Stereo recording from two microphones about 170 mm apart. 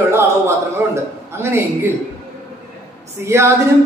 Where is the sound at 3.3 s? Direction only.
15° right (ahead or behind).